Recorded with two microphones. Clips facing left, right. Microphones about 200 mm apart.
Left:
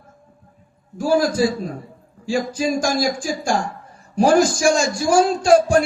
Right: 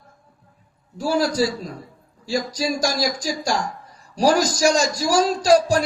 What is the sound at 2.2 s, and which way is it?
A man's voice, 40° right (ahead or behind).